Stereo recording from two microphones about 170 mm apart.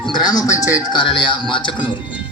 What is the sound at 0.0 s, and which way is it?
Music, 25° left (ahead or behind).